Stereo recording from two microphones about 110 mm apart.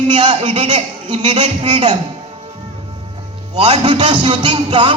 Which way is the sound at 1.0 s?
45° right (ahead or behind).